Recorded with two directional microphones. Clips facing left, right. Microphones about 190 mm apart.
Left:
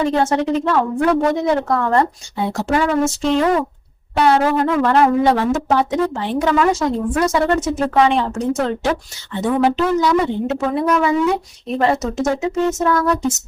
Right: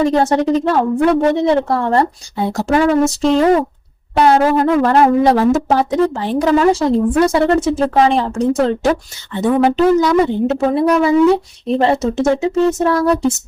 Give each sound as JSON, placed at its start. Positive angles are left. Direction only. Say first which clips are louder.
{"t": 0.0, "sound": "speech", "louder": "right 3 dB", "side_deg": -35}
{"t": 9.4, "sound": "speech", "louder": "right 4 dB", "side_deg": -45}